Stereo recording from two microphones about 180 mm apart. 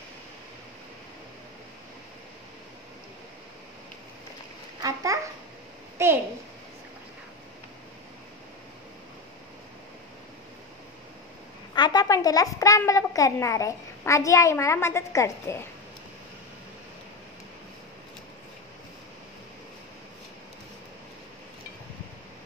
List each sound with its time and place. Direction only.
4.8 s a child's voice: 20° right (ahead or behind)
6.0 s a sound: 15° right (ahead or behind)
11.7 s a woman's voice: 25° left (ahead or behind)